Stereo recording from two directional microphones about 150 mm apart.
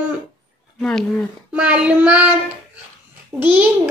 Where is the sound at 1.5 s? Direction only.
10° right (ahead or behind).